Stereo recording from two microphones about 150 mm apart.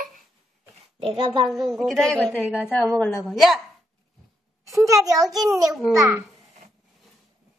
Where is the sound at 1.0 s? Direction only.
30° right (ahead or behind).